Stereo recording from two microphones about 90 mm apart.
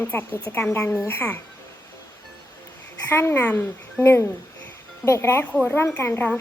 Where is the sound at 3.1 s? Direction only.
25° left (ahead or behind).